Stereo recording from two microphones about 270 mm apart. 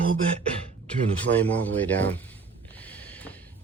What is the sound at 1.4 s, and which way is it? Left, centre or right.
Speech, centre.